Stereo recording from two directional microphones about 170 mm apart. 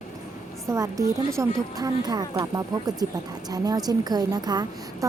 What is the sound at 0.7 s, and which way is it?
Speech, 20° right (ahead or behind).